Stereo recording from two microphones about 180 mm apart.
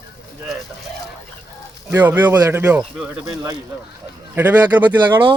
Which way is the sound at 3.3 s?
20° right (ahead or behind).